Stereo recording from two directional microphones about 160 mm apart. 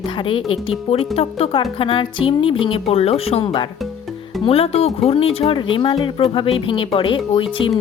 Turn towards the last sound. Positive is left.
turn(degrees=35)  # may be behind; listen again after turning